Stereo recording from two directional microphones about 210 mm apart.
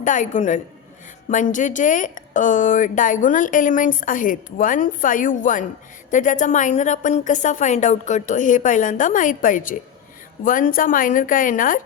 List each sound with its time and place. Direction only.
0.0 s a woman's voice: 35° left (ahead or behind)